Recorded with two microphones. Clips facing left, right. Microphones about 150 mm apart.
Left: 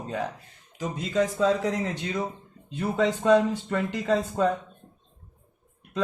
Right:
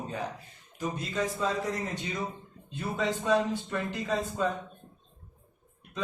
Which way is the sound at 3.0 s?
90° left.